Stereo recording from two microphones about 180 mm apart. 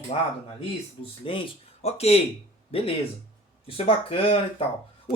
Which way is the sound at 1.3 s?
30° left (ahead or behind).